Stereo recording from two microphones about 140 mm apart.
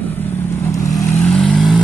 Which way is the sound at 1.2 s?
5° left (ahead or behind).